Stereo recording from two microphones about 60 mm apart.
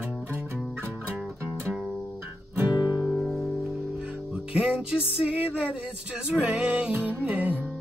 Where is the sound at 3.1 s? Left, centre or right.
Centre.